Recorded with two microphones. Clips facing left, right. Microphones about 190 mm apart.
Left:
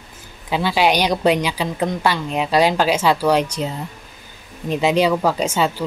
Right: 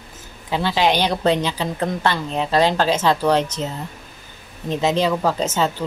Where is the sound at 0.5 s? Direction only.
10° left (ahead or behind).